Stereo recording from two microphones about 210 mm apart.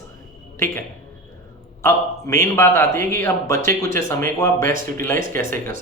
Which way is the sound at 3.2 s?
15° left (ahead or behind).